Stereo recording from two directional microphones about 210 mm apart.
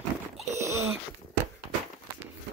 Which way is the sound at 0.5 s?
15° right (ahead or behind).